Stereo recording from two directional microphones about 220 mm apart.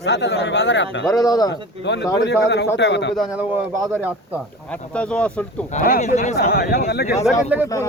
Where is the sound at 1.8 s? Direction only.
50° left (ahead or behind).